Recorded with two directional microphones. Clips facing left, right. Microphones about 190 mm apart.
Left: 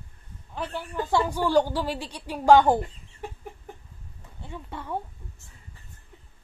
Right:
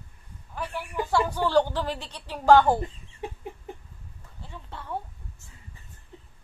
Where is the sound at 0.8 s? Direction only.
10° right (ahead or behind).